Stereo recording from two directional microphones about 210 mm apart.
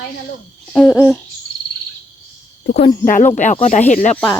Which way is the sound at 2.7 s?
50° left (ahead or behind).